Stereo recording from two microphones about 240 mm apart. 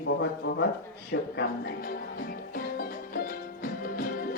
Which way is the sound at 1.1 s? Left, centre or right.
Left.